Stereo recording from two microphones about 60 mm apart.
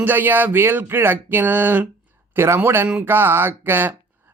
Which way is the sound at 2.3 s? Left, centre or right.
Right.